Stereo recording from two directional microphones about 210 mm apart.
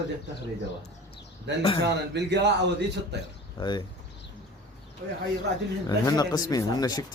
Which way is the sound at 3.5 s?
20° left (ahead or behind).